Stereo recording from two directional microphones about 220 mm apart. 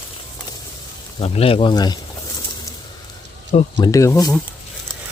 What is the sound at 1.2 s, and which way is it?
Speech, 25° left (ahead or behind).